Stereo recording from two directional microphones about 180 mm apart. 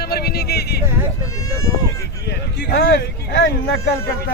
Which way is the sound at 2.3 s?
60° left (ahead or behind).